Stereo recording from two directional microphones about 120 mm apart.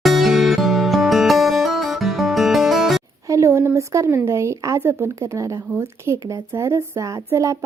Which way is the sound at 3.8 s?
25° right (ahead or behind).